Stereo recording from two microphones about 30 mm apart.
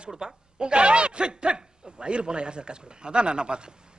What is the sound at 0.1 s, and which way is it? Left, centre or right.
A man's voice, centre.